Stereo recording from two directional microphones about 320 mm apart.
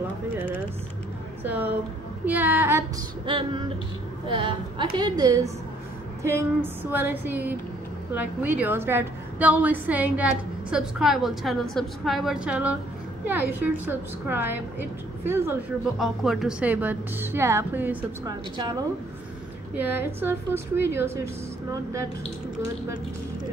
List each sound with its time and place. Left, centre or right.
1.4 s a woman's voice: centre
14.2 s a woman's voice: centre